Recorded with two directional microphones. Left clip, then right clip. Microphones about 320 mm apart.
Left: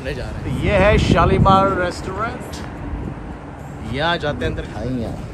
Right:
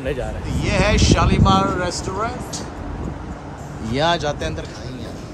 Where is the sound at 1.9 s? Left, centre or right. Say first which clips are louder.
Even; centre.